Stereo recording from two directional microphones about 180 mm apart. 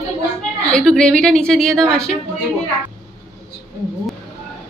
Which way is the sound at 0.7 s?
5° left (ahead or behind).